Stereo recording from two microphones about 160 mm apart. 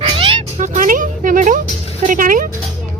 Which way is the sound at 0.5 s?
50° right (ahead or behind).